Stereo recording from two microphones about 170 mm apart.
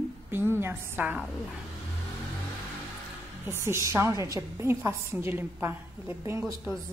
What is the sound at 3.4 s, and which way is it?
A woman's voice, 15° right (ahead or behind).